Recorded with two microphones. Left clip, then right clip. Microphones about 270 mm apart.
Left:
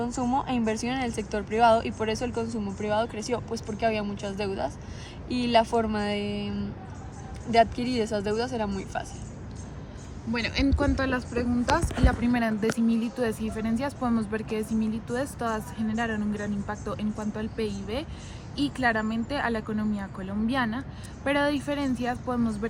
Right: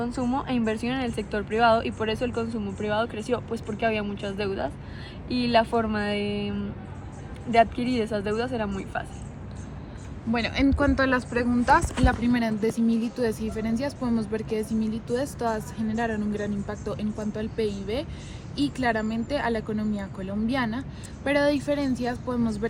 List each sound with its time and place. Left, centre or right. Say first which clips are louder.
0.0 s a woman's voice: left 1 dB; left
10.3 s speech: right 2 dB; centre
10.8 s speech: right 4 dB; right
12.2 s speech: right 1 dB; centre